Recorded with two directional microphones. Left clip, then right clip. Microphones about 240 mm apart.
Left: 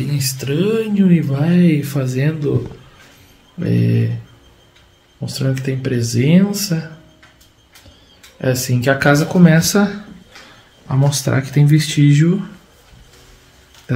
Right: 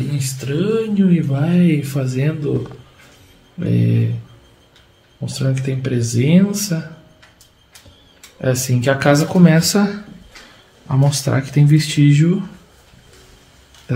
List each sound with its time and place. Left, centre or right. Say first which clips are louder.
0.1 s speech: left 3 dB; left
3.5 s speech: left 1 dB; centre
5.2 s speech: left 1 dB; centre
8.4 s speech: left 1 dB; centre
13.9 s a sound: left 2 dB; centre